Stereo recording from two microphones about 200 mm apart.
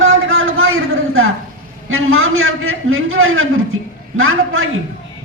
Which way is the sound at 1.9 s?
90° right.